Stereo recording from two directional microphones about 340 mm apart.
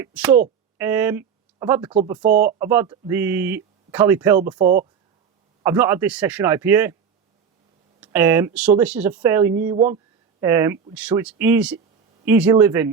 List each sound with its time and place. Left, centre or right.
0.0 s speech: centre
5.6 s speech: centre
8.0 s speech: centre
9.7 s speech: centre
10.4 s speech: centre